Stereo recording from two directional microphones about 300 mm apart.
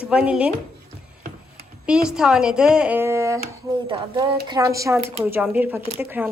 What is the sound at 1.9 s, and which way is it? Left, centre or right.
A woman's voice, centre.